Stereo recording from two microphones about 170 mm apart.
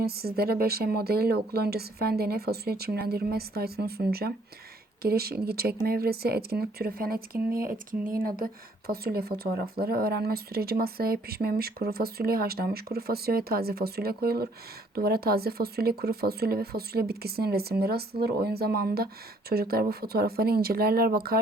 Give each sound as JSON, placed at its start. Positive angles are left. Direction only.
{"t": 0.0, "sound": "speech", "side_deg": -65}
{"t": 8.9, "sound": "speech", "side_deg": -65}